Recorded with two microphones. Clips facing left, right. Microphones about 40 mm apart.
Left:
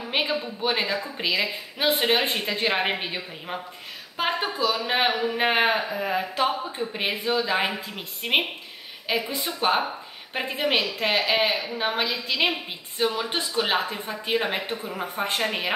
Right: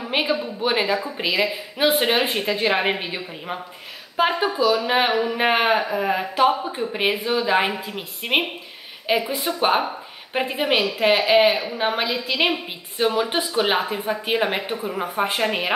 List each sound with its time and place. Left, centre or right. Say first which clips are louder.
0.0 s a sound: right 3 dB; centre
0.7 s speech: right 4 dB; centre
9.2 s speech: right 4 dB; right
9.6 s speech: right 3 dB; centre
12.9 s a woman's voice: right 5 dB; right
13.6 s speech: right 3 dB; centre